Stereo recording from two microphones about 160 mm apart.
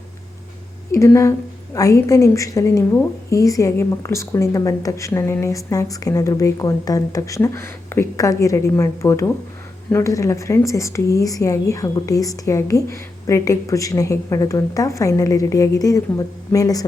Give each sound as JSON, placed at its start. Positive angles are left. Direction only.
{"t": 0.9, "sound": "speech", "side_deg": 20}